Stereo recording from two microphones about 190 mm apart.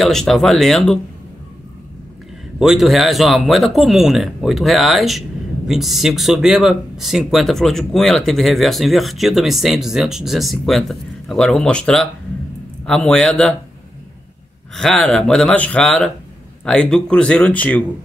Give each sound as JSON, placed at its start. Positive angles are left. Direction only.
{"t": 0.0, "sound": "speech", "side_deg": 0}
{"t": 2.6, "sound": "speech", "side_deg": 0}
{"t": 14.8, "sound": "speech", "side_deg": 5}